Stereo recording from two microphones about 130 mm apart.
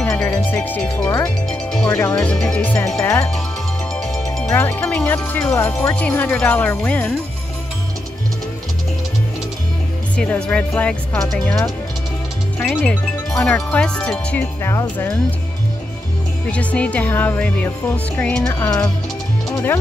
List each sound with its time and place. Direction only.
0.0 s music: 10° left (ahead or behind)
1.5 s speech: 5° left (ahead or behind)
1.9 s speech: 15° left (ahead or behind)
2.1 s speech: 5° left (ahead or behind)
3.9 s music: 5° left (ahead or behind)
4.6 s speech: 15° left (ahead or behind)
10.1 s speech: 10° left (ahead or behind)
12.6 s speech: 5° left (ahead or behind)
16.4 s speech: 10° left (ahead or behind)